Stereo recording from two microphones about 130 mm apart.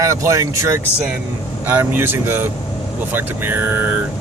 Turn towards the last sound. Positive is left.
turn(degrees=-15)  # may be behind; listen again after turning